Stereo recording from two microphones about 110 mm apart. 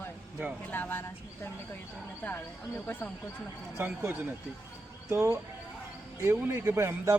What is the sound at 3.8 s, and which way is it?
A man's voice, 20° right (ahead or behind).